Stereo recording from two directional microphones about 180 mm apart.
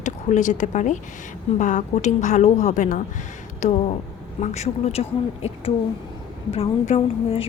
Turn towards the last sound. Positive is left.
turn(degrees=30)  # may be behind; listen again after turning